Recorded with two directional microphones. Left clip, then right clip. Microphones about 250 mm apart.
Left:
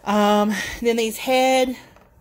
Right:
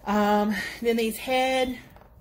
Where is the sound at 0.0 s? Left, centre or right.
Left.